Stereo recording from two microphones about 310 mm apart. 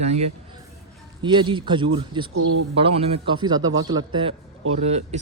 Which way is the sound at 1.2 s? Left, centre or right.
Centre.